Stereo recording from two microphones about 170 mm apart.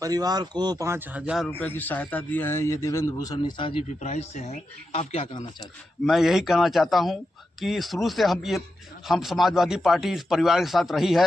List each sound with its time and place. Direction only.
0.0 s speech: 20° right (ahead or behind); by 1.5 s 5° right (ahead or behind)
1.5 s speech: 10° left (ahead or behind)
3.3 s speech: 30° left (ahead or behind)
3.8 s speech: 40° left (ahead or behind)
6.1 s a man's voice: centre (ahead or behind)